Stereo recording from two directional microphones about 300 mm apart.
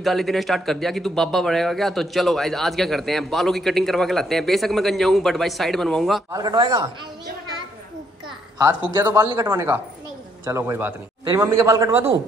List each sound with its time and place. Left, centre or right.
0.0 s speech: centre
6.3 s a man's voice: centre
8.5 s a man's voice: centre